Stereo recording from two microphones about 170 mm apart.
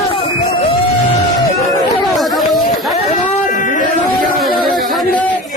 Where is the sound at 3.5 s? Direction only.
50° left (ahead or behind).